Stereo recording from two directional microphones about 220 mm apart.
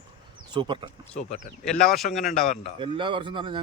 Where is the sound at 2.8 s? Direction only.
25° right (ahead or behind).